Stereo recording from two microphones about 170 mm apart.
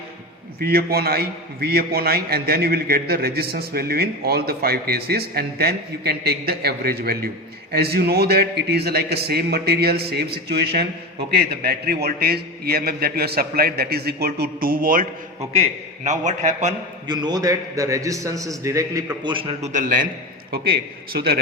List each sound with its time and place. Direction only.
0.6 s a man's voice: 65° right (ahead or behind)
15.5 s a man's voice: 40° right (ahead or behind)
17.1 s a man's voice: 25° right (ahead or behind)
19.7 s a man's voice: 50° right (ahead or behind)
20.5 s a man's voice: 60° right (ahead or behind)